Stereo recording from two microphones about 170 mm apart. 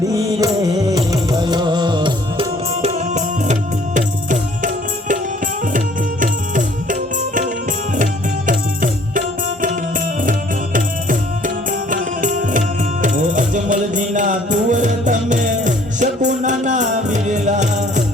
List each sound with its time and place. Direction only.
0.1 s music: 20° right (ahead or behind); by 5.2 s 50° right (ahead or behind)
5.7 s tabla: 50° right (ahead or behind)
7.9 s music: 50° right (ahead or behind)
10.8 s music: 50° right (ahead or behind)